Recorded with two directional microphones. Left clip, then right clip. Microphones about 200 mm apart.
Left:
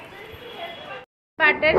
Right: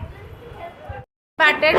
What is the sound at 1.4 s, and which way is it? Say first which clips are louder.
Speech: right 2 dB; 20° right (ahead or behind).